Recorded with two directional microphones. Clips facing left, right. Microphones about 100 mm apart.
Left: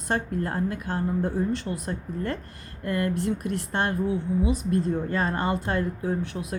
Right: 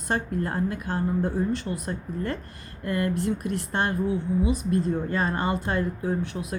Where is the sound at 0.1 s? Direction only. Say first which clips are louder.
Even; 15° right (ahead or behind).